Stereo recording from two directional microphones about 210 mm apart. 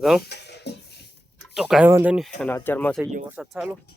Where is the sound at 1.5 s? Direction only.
5° right (ahead or behind).